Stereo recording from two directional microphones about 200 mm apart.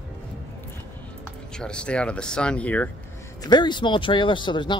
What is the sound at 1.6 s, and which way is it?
Speech, 5° left (ahead or behind).